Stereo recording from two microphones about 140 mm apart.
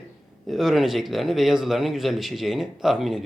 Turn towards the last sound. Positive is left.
turn(degrees=0)  # may be behind; listen again after turning